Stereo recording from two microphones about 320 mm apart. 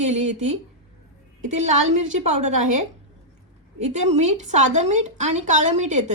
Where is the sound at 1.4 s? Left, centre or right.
Right.